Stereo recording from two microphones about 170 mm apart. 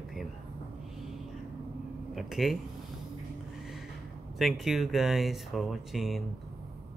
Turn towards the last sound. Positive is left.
turn(degrees=0)  # may be behind; listen again after turning